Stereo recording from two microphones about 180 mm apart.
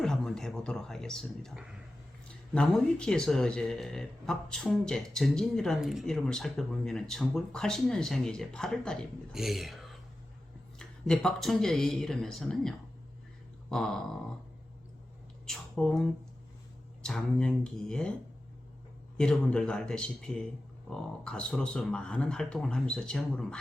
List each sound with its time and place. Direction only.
0.0 s speech: 5° left (ahead or behind)
15.4 s speech: 5° left (ahead or behind)
19.1 s speech: 5° left (ahead or behind)